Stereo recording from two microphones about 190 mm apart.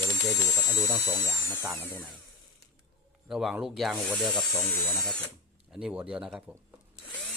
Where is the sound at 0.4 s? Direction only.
15° left (ahead or behind).